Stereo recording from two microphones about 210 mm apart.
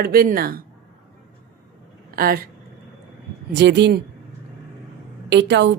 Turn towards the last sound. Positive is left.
turn(degrees=-55)  # may be behind; listen again after turning